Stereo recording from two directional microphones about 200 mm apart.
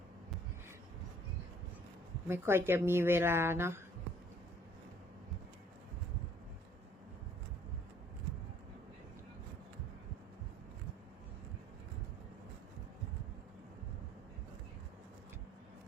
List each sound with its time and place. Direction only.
2.2 s speech: 10° right (ahead or behind)